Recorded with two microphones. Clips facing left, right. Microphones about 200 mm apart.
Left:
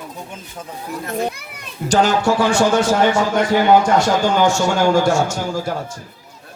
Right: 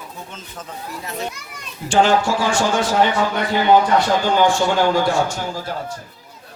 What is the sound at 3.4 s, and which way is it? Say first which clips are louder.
A man's voice: left 1 dB; 45° left (ahead or behind).